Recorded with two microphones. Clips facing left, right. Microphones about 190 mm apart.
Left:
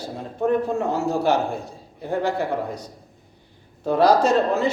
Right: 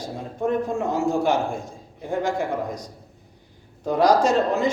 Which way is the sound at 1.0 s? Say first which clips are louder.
Right 1 dB; 35° left (ahead or behind).